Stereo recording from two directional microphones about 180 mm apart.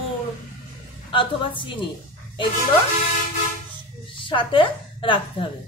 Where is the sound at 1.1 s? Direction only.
30° left (ahead or behind).